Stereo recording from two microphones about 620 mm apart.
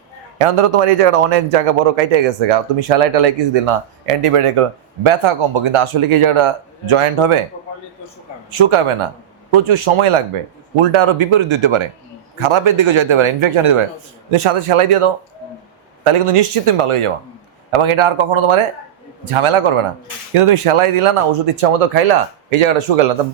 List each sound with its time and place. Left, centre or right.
0.3 s speech: right
8.5 s speech: right
16.0 s speech: right